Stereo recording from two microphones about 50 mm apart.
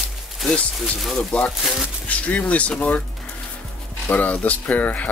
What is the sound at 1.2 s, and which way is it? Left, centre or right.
Speech, centre.